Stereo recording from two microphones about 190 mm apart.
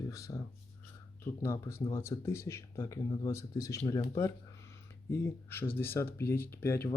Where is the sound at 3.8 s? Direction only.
30° left (ahead or behind).